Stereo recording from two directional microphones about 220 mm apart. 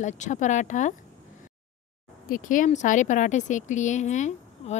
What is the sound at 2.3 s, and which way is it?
Speech, 35° left (ahead or behind).